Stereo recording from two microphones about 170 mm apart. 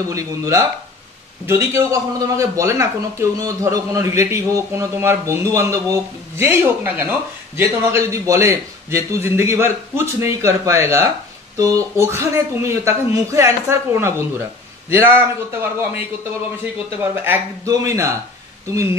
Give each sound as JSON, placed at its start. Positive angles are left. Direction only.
{"t": 0.1, "sound": "speech", "side_deg": -15}
{"t": 17.0, "sound": "speech", "side_deg": -10}